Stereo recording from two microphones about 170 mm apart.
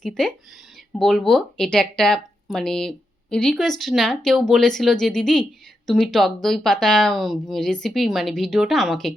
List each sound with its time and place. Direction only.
0.0 s speech: 5° left (ahead or behind)